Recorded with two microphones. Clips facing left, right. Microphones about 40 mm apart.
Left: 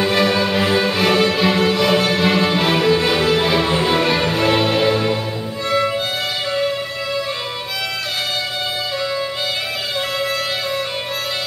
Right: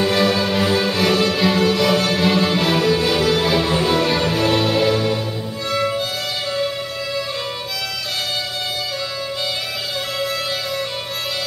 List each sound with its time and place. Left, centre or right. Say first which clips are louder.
0.0 s music: left 1 dB; centre